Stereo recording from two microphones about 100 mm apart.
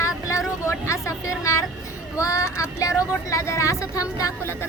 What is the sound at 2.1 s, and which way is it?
Speech, 35° left (ahead or behind).